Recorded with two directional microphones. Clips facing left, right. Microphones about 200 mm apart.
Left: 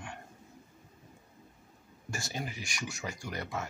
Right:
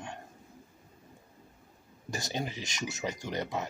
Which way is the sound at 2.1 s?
20° right (ahead or behind).